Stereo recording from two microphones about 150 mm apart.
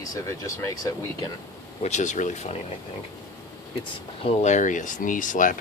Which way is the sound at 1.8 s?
50° left (ahead or behind).